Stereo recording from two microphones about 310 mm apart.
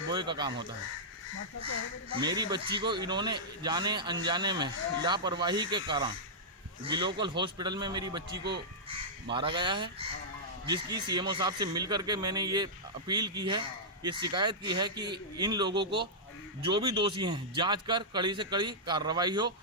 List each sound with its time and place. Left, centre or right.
0.1 s speech: centre
2.2 s speech: centre
9.3 s speech: centre